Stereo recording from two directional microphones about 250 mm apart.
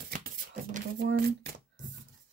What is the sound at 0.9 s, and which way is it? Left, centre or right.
Speech, right.